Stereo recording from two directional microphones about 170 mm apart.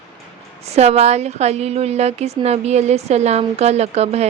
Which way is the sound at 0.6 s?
40° right (ahead or behind).